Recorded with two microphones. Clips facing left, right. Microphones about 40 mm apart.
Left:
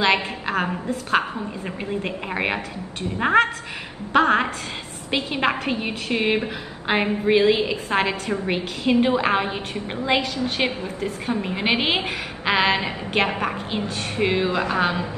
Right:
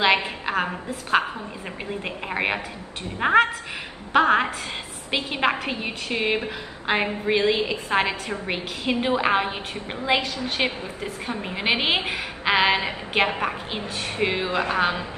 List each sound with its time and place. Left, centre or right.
0.0 s a woman's voice: centre
14.1 s a man's voice: right